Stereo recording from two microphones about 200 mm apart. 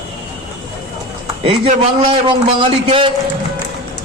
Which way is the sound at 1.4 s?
25° right (ahead or behind).